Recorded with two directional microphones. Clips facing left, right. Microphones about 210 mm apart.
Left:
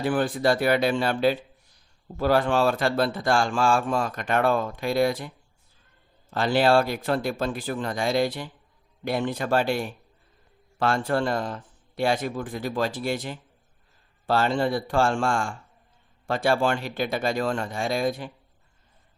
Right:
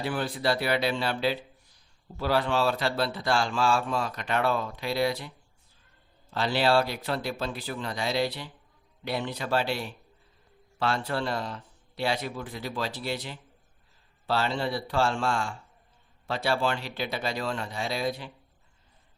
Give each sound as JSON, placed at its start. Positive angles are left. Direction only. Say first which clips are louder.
{"t": 0.0, "sound": "speech", "louder": "left 6 dB", "side_deg": 50}
{"t": 6.3, "sound": "speech", "louder": "left 4 dB", "side_deg": 50}